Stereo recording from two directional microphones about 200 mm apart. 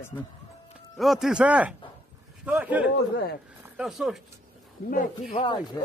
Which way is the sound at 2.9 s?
55° left (ahead or behind).